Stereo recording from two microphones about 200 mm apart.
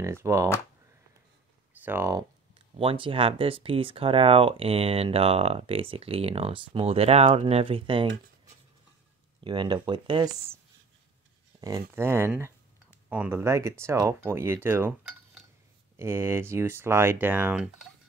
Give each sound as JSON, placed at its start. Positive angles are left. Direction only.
{"t": 0.0, "sound": "speech", "side_deg": -15}
{"t": 1.7, "sound": "speech", "side_deg": -10}
{"t": 2.8, "sound": "speech", "side_deg": -25}
{"t": 9.4, "sound": "speech", "side_deg": -20}
{"t": 11.6, "sound": "speech", "side_deg": -15}
{"t": 16.0, "sound": "speech", "side_deg": -15}